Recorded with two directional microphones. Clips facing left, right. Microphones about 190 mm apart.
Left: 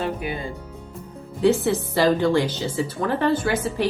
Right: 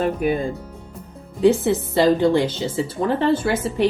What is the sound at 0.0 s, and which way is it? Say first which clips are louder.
Speech: right 6 dB; 45° right (ahead or behind).